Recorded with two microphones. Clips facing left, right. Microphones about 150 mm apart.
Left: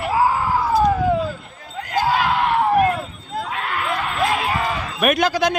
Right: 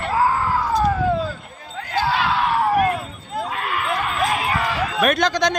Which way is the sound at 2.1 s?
45° left (ahead or behind).